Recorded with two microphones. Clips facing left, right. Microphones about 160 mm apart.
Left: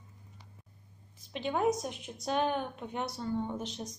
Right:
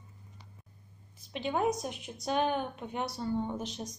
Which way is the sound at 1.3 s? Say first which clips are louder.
Left 1 dB; 5° right (ahead or behind).